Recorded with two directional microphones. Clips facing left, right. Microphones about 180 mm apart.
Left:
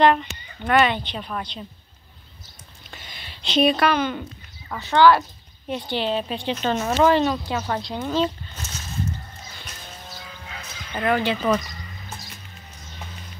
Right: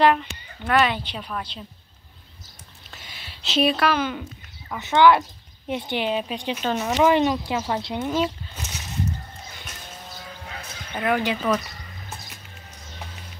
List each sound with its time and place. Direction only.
0.0 s speech: centre (ahead or behind)
2.9 s a sound: 5° right (ahead or behind)
4.7 s speech: 20° right (ahead or behind); by 7.0 s centre (ahead or behind)
7.0 s speech: 15° right (ahead or behind)
11.0 s speech: 5° right (ahead or behind)